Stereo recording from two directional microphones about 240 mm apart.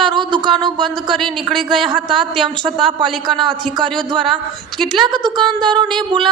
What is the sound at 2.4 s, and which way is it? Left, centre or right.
Speech, centre.